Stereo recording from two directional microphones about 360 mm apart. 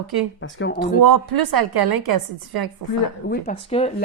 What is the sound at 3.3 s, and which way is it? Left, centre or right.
Speech, centre.